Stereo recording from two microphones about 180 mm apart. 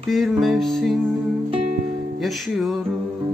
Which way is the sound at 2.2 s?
Centre (ahead or behind).